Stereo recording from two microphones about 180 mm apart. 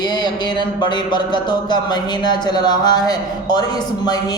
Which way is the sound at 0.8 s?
25° left (ahead or behind).